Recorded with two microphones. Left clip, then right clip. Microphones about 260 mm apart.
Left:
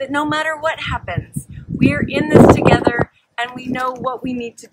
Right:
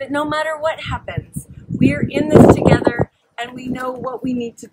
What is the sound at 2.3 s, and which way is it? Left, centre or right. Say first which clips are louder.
Speech: even; right.